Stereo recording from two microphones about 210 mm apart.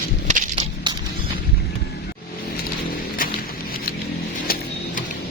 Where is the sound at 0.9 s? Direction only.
20° right (ahead or behind).